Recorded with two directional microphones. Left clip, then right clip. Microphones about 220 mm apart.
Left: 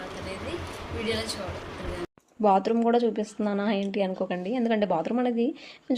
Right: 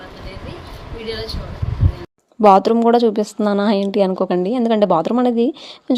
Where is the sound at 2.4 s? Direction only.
40° right (ahead or behind).